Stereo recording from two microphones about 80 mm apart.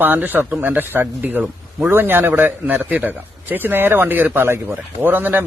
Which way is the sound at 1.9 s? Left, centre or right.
Right.